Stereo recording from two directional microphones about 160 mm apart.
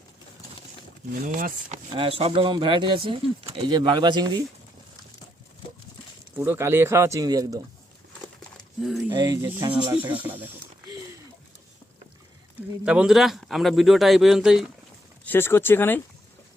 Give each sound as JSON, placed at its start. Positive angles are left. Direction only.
{"t": 1.3, "sound": "speech", "side_deg": -50}
{"t": 1.9, "sound": "speech", "side_deg": -35}
{"t": 6.3, "sound": "speech", "side_deg": -15}
{"t": 8.5, "sound": "a sound", "side_deg": 0}
{"t": 9.0, "sound": "speech", "side_deg": -25}
{"t": 10.2, "sound": "speech", "side_deg": -10}
{"t": 12.8, "sound": "speech", "side_deg": -5}
{"t": 15.2, "sound": "speech", "side_deg": 15}